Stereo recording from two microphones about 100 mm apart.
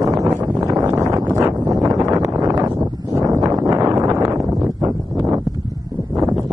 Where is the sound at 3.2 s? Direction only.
35° right (ahead or behind).